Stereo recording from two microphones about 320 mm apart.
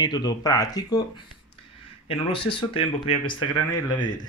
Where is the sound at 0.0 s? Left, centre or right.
Centre.